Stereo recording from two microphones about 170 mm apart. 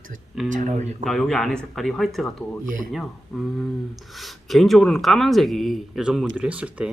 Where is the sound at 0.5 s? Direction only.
45° right (ahead or behind).